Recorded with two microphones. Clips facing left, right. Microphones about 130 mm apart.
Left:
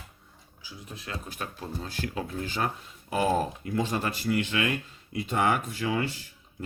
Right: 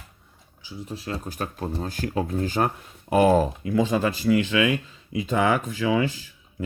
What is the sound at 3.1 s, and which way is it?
Speech, 75° right (ahead or behind).